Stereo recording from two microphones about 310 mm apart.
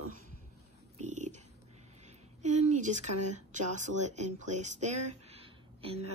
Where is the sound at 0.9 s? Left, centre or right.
Right.